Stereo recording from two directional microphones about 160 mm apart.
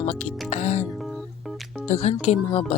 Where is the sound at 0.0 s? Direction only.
45° left (ahead or behind).